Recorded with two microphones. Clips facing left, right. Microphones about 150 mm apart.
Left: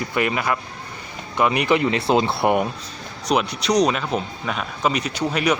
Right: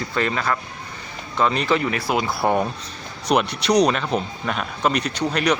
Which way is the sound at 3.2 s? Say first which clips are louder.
Right 1 dB; centre (ahead or behind).